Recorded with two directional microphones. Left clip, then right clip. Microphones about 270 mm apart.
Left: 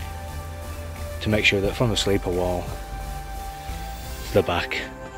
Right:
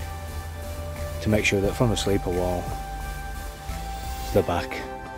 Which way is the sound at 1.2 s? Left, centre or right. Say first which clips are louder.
Left 2 dB; centre.